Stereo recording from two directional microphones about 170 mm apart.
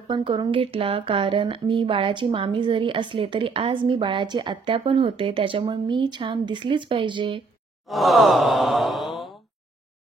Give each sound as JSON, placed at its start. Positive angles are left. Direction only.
{"t": 0.1, "sound": "speech", "side_deg": -30}
{"t": 7.8, "sound": "sigh", "side_deg": 0}